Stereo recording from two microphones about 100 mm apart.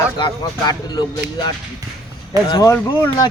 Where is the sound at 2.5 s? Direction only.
35° left (ahead or behind).